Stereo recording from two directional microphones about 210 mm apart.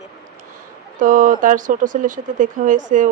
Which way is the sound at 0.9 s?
40° right (ahead or behind).